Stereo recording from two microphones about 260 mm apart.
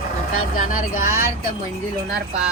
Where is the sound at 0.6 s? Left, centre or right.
Left.